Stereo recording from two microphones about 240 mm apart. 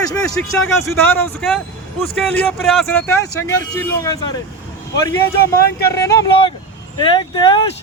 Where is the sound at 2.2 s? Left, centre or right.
Centre.